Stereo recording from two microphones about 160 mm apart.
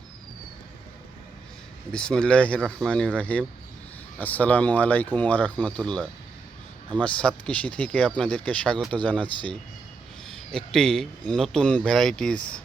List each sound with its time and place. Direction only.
1.9 s speech: 5° left (ahead or behind)